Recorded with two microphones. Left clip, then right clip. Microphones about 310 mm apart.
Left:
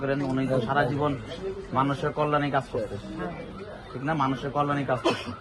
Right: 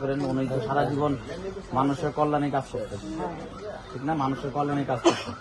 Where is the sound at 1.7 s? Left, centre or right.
Centre.